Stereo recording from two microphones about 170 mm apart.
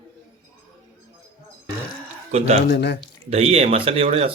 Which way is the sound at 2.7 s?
85° left.